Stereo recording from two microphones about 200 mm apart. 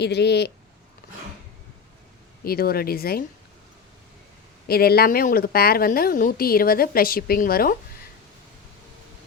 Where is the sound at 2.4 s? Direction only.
50° left (ahead or behind).